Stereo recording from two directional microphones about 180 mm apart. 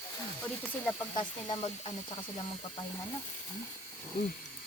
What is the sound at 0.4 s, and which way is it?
Speech, 10° left (ahead or behind).